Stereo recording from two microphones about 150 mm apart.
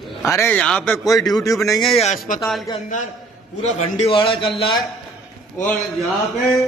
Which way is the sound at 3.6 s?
50° left (ahead or behind).